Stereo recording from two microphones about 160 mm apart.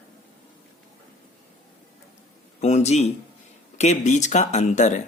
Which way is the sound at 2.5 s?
45° left (ahead or behind).